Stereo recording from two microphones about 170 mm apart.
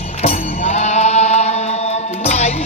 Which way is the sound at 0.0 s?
35° left (ahead or behind).